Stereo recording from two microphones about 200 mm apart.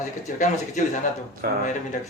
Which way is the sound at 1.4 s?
45° right (ahead or behind).